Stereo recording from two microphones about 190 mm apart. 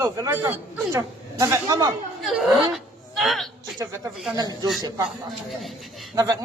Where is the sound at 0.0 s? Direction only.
15° right (ahead or behind).